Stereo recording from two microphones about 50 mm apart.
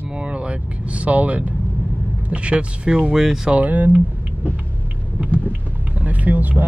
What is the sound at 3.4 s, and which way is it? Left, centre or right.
Speech, right.